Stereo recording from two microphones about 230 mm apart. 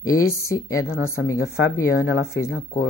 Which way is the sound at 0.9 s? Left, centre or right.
Left.